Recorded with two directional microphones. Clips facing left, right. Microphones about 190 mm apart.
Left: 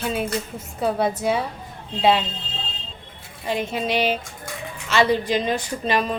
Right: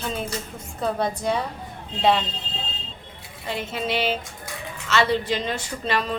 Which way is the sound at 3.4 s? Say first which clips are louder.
Left 4 dB; 15° left (ahead or behind).